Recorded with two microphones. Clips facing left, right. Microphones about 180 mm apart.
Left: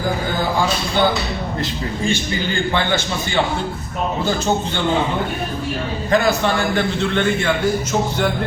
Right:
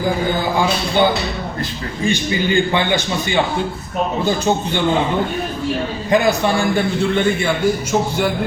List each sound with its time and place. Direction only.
2.0 s a man's voice: 15° right (ahead or behind)
6.1 s a man's voice: 15° right (ahead or behind)